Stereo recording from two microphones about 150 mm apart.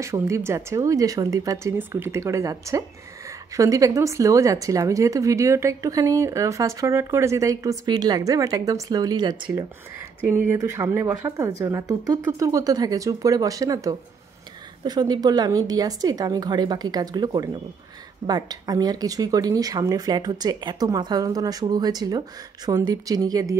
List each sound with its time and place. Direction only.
0.0 s speech: 20° right (ahead or behind)
10.2 s speech: 15° right (ahead or behind)